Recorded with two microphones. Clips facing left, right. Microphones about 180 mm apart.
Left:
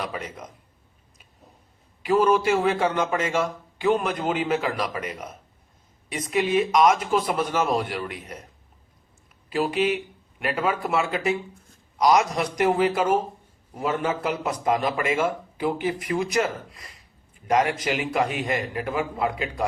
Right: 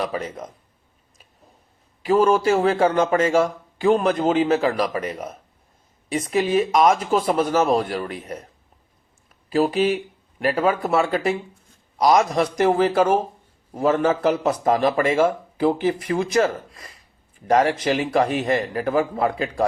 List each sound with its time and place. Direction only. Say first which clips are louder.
0.0 s a man's voice: right 6 dB; 35° right (ahead or behind)
2.5 s a man's voice: right 3 dB; 30° right (ahead or behind)
2.8 s a man's voice: right 6 dB; 45° right (ahead or behind); by 7.4 s 25° right (ahead or behind)
7.5 s a man's voice: right 5 dB; 45° right (ahead or behind)
9.5 s a man's voice: right 4 dB; 30° right (ahead or behind)